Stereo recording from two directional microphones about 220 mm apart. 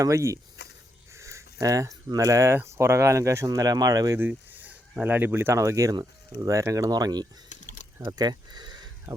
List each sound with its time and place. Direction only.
0.0 s speech: 15° right (ahead or behind)
0.6 s mechanisms: 50° left (ahead or behind)
1.1 s speech: 15° right (ahead or behind)
7.5 s a sound: 35° left (ahead or behind)
8.0 s speech: 20° right (ahead or behind)